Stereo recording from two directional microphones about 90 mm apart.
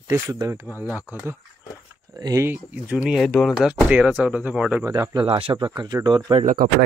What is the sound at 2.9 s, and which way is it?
Speech, 10° right (ahead or behind).